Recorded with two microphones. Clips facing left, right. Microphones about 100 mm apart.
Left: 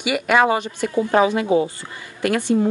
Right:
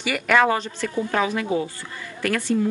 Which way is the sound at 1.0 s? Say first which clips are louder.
Left 6 dB; 30° left (ahead or behind).